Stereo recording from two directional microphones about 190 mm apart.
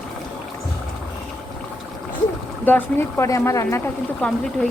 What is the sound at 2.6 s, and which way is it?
Speech, 10° left (ahead or behind).